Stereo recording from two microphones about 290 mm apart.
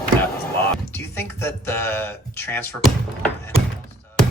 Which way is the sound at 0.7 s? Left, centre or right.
Centre.